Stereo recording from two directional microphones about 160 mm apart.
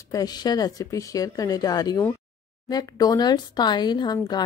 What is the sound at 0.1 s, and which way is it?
Speech, 25° left (ahead or behind).